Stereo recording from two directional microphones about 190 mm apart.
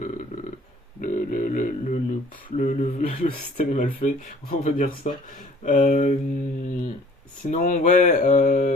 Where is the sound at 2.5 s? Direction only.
40° left (ahead or behind).